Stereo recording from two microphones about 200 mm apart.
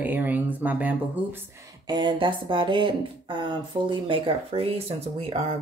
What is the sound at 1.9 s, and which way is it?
Speech, 25° right (ahead or behind).